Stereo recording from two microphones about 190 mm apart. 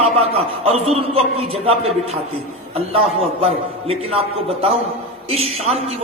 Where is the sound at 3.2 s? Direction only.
30° right (ahead or behind).